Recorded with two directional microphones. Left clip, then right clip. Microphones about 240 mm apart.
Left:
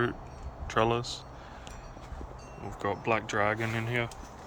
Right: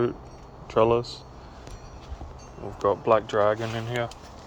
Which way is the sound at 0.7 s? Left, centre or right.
Centre.